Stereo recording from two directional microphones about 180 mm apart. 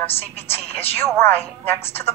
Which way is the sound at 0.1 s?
35° left (ahead or behind).